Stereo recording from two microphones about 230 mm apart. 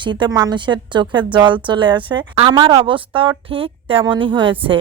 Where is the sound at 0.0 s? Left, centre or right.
Centre.